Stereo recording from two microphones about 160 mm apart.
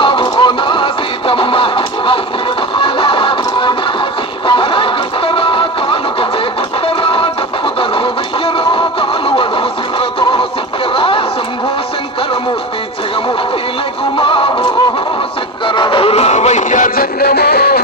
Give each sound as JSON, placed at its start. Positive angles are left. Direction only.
{"t": 0.0, "sound": "music", "side_deg": 30}
{"t": 10.9, "sound": "a sound", "side_deg": 35}
{"t": 14.2, "sound": "music", "side_deg": 35}
{"t": 15.6, "sound": "music", "side_deg": 30}